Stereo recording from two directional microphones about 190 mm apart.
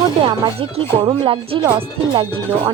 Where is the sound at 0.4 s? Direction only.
25° right (ahead or behind).